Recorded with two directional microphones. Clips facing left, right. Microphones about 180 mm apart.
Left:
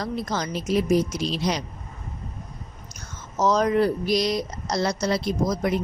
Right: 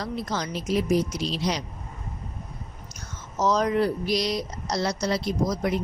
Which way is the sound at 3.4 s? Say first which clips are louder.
Left 2 dB; 50° left (ahead or behind).